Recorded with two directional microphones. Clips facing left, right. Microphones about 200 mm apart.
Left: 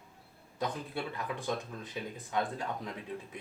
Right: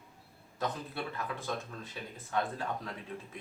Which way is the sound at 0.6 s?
15° left (ahead or behind).